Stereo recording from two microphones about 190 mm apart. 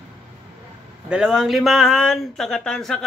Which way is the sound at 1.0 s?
5° right (ahead or behind).